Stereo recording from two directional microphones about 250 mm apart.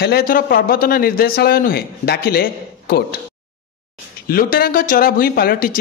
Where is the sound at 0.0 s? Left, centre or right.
Left.